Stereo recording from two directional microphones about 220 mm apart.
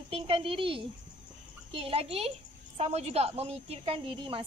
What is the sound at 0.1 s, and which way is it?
A woman's voice, 25° right (ahead or behind).